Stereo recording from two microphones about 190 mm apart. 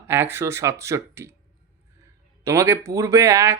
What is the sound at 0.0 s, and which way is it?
Speech, 10° right (ahead or behind).